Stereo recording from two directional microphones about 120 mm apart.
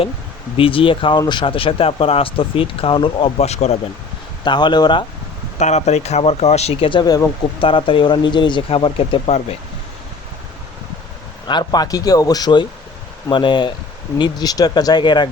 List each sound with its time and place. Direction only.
0.5 s speech: 50° left (ahead or behind); by 3.8 s 65° left (ahead or behind)
4.4 s a man's voice: 40° left (ahead or behind)
5.5 s speech: 75° left (ahead or behind); by 9.6 s 55° left (ahead or behind)
11.4 s a man's voice: 35° left (ahead or behind)